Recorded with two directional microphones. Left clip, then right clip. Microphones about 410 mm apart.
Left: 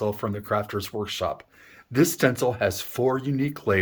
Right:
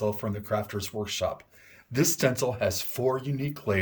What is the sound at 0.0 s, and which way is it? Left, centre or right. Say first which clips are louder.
Speech: left 3 dB; centre.